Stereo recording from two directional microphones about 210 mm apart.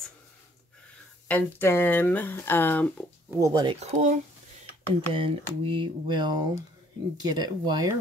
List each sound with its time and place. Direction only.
1.3 s speech: 10° left (ahead or behind)
3.3 s speech: 15° right (ahead or behind)
3.8 s speech: 35° right (ahead or behind)
5.1 s speech: 25° right (ahead or behind)